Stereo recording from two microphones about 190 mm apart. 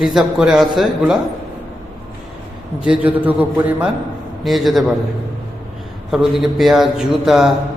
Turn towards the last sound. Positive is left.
turn(degrees=0)  # may be behind; listen again after turning